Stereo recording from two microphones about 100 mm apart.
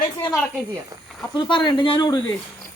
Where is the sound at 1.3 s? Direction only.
50° left (ahead or behind).